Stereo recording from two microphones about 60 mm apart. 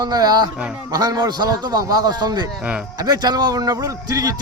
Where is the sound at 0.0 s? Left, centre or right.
Right.